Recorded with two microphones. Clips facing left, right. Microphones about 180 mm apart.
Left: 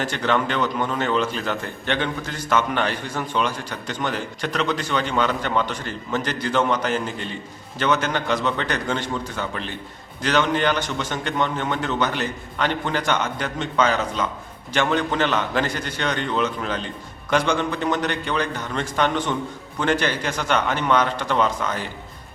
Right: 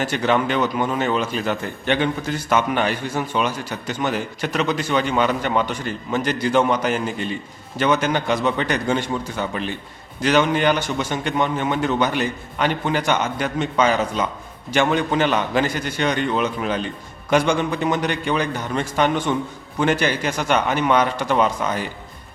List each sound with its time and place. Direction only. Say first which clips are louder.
0.0 s a man's voice: right 3 dB; 10° right (ahead or behind)